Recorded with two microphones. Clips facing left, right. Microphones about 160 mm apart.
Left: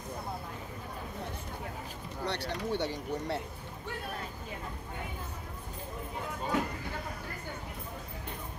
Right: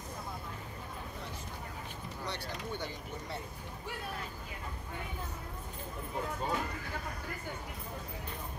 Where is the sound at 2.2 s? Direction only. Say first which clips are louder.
Left 7 dB; 70° left (ahead or behind).